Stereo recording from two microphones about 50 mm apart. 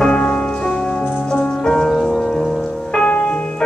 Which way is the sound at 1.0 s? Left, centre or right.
Left.